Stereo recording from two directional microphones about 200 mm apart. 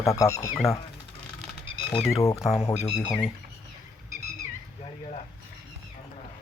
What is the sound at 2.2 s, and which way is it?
Speech, 15° left (ahead or behind).